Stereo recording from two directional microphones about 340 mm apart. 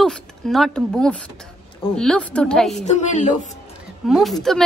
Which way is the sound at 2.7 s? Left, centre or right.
Centre.